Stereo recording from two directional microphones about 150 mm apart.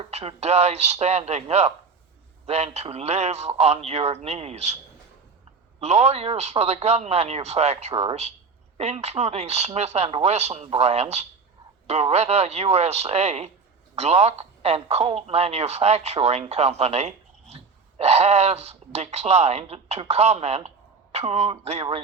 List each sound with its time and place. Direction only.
0.0 s a man's voice: 40° right (ahead or behind)
5.8 s a man's voice: 45° right (ahead or behind)